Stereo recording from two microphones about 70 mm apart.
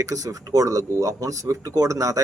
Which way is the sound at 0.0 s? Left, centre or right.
Right.